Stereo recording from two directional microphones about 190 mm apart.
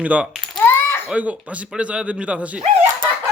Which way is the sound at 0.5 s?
10° left (ahead or behind).